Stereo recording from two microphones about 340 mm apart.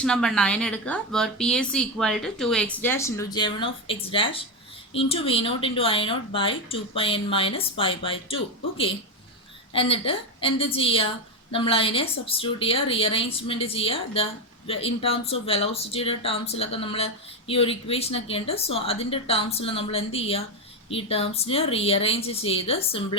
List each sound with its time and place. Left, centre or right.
0.0 s a woman's voice: centre
9.7 s speech: centre